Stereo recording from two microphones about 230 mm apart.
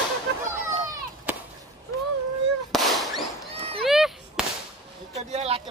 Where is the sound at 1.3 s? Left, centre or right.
Centre.